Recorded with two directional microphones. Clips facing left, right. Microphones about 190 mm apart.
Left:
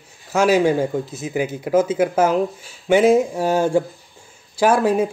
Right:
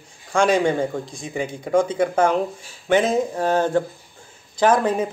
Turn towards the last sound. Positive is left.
turn(degrees=10)  # may be behind; listen again after turning